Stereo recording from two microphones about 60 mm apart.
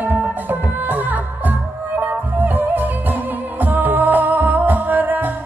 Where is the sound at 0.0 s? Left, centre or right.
Right.